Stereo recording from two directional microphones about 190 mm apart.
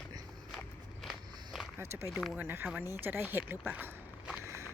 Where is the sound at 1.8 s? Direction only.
15° right (ahead or behind).